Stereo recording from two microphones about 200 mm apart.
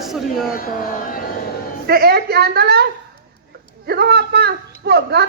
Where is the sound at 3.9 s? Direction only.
50° right (ahead or behind).